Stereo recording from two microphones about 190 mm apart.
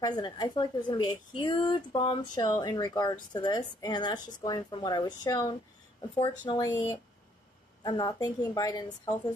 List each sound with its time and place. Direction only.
0.0 s a woman's voice: 20° left (ahead or behind)
7.8 s a woman's voice: 20° left (ahead or behind)